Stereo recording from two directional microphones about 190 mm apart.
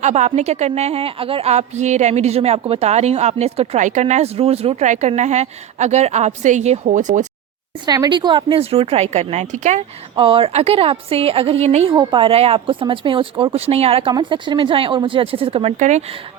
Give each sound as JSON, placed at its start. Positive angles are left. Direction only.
{"t": 0.0, "sound": "a woman's voice", "side_deg": -35}
{"t": 7.9, "sound": "a woman's voice", "side_deg": -20}